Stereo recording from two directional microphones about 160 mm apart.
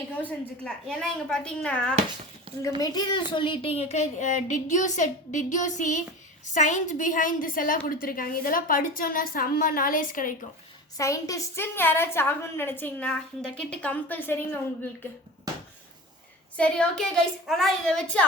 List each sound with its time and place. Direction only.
0.2 s speech: 5° left (ahead or behind)
2.8 s a woman's voice: 25° left (ahead or behind); by 10.3 s 60° left (ahead or behind)
10.9 s a woman's voice: 20° left (ahead or behind)
16.6 s speech: 5° left (ahead or behind)